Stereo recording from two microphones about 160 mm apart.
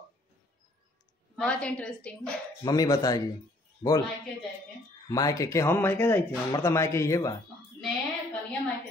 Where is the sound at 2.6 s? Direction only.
25° left (ahead or behind).